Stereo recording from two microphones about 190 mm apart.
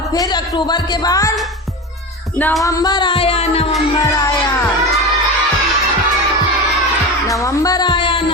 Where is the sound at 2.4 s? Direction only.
10° left (ahead or behind); by 3.7 s 30° left (ahead or behind).